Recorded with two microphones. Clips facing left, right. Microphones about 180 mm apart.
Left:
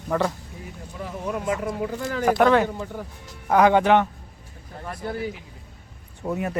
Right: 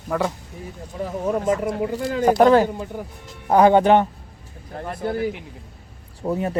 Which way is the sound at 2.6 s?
15° right (ahead or behind).